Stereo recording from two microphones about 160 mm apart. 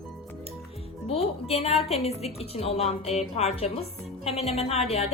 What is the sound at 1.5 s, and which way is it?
A woman's voice, 40° left (ahead or behind).